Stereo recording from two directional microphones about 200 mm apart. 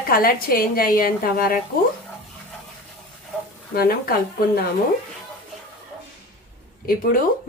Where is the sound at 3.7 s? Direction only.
50° left (ahead or behind).